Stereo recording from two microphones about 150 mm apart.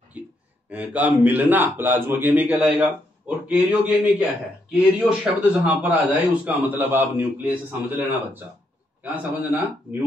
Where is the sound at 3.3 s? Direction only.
5° right (ahead or behind).